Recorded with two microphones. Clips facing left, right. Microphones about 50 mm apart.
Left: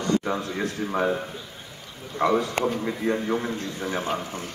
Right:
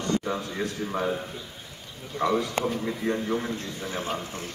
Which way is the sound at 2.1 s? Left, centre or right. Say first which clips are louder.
Left 3 dB; left.